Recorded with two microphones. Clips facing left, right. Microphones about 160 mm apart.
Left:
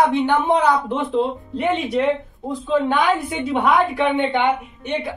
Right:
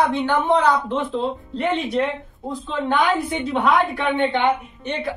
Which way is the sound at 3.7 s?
15° left (ahead or behind).